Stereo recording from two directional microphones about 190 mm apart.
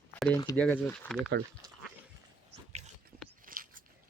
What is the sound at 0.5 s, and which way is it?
Speech, 10° left (ahead or behind).